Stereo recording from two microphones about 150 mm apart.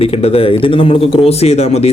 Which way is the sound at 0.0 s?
40° left (ahead or behind).